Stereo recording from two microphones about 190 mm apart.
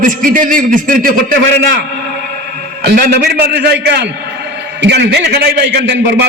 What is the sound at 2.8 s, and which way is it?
A man's voice, 55° right (ahead or behind).